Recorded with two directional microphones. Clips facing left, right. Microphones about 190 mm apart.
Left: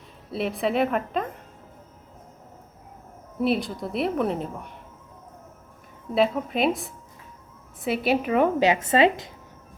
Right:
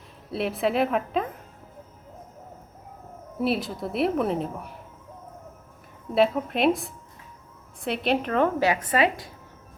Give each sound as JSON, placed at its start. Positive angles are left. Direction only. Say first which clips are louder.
{"t": 0.3, "sound": "a woman's voice", "louder": "even", "side_deg": 0}
{"t": 3.4, "sound": "a woman's voice", "louder": "left 2 dB", "side_deg": 0}
{"t": 6.1, "sound": "a woman's voice", "louder": "even", "side_deg": 0}